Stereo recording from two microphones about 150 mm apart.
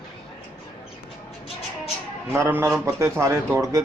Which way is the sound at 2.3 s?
15° right (ahead or behind).